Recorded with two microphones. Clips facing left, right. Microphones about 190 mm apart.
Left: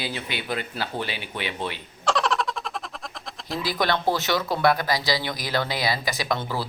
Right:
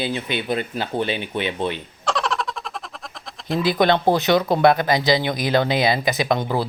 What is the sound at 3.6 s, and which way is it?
Speech, 20° right (ahead or behind).